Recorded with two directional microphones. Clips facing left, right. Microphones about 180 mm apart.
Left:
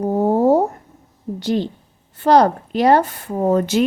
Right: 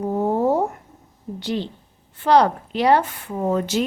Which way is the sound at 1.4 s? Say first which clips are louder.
Left 5 dB; 45° left (ahead or behind).